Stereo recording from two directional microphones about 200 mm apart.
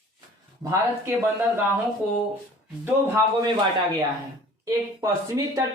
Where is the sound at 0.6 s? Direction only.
10° right (ahead or behind).